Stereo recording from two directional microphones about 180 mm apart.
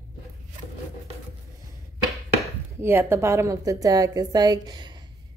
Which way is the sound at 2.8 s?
10° right (ahead or behind).